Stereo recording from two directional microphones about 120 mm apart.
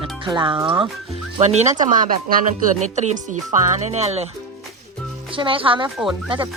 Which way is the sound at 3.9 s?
65° right (ahead or behind).